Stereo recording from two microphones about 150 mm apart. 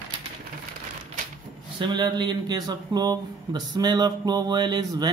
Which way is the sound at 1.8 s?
30° right (ahead or behind).